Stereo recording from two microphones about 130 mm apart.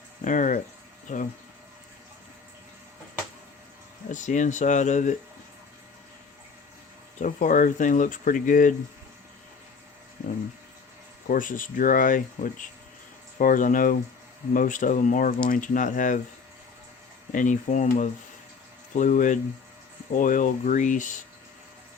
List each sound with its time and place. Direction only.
0.3 s speech: 75° left (ahead or behind)
4.1 s speech: 75° left (ahead or behind)
7.2 s speech: 85° left
11.3 s speech: 90° left
17.3 s speech: 75° left (ahead or behind)